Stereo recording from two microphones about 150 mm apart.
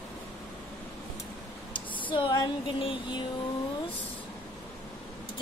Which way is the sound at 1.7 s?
35° left (ahead or behind).